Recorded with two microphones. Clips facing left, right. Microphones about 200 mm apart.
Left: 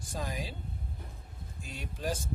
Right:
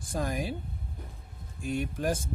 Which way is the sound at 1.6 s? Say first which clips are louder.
Right 7 dB; 55° right (ahead or behind).